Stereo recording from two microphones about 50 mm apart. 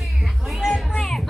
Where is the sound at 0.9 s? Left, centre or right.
Centre.